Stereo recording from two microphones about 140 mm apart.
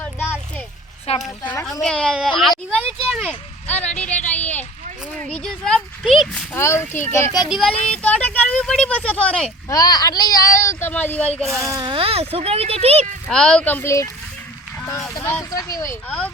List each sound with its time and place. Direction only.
0.0 s a sound: 10° left (ahead or behind)
1.1 s speech: 50° left (ahead or behind)
1.8 s speech: 5° left (ahead or behind)
4.3 s a sound: 10° left (ahead or behind)
5.3 s speech: 5° left (ahead or behind)
6.5 s speech: 20° left (ahead or behind)
7.5 s speech: 5° left (ahead or behind)
9.6 s speech: 25° left (ahead or behind); by 11.7 s centre (ahead or behind)
11.7 s speech: 35° right (ahead or behind)
13.2 s speech: 5° left (ahead or behind); by 16.0 s 20° left (ahead or behind)
16.0 s speech: 10° left (ahead or behind)